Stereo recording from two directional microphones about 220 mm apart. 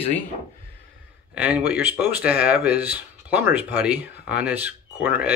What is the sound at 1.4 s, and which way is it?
Speech, 5° right (ahead or behind).